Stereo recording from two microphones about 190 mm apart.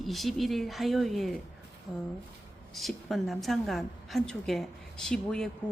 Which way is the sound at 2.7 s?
Centre (ahead or behind).